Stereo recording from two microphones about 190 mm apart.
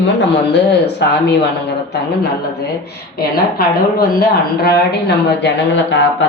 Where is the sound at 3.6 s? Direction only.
55° left (ahead or behind).